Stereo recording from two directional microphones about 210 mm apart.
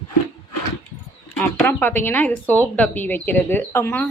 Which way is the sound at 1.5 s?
10° left (ahead or behind).